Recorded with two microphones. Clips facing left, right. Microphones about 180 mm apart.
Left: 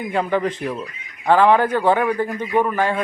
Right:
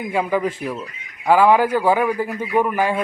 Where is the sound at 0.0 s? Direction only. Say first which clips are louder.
Even; 10° right (ahead or behind).